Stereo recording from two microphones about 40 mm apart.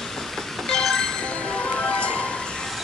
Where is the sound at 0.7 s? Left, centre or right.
Centre.